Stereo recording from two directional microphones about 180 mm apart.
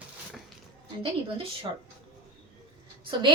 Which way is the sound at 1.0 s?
30° right (ahead or behind).